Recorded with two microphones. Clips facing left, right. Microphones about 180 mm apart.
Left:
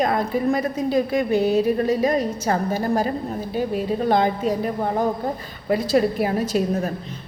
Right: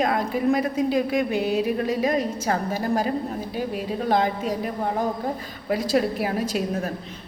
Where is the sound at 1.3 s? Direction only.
35° left (ahead or behind).